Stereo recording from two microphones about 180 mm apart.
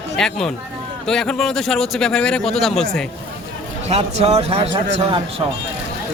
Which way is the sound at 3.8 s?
35° right (ahead or behind).